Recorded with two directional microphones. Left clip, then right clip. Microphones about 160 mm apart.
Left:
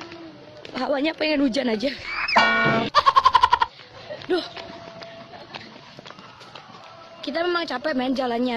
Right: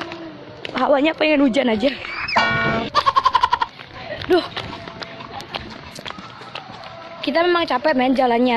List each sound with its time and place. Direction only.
0.7 s a woman's voice: 15° left (ahead or behind)
2.1 s music: centre (ahead or behind)
7.2 s a woman's voice: 10° left (ahead or behind)